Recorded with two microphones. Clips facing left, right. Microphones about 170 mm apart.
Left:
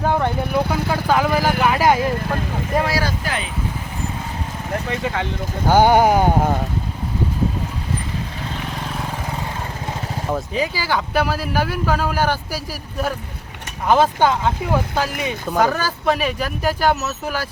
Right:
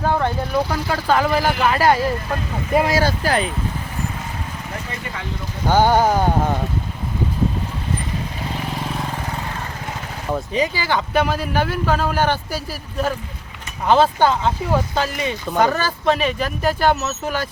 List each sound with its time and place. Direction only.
0.0 s speech: 15° left (ahead or behind)
2.7 s speech: 15° right (ahead or behind)
3.0 s speech: 35° right (ahead or behind)
5.6 s speech: 15° left (ahead or behind)
10.3 s speech: 5° left (ahead or behind)